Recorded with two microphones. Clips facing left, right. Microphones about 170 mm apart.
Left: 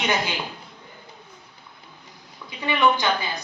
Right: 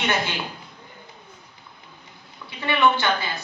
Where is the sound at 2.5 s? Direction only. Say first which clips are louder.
Even; 15° left (ahead or behind).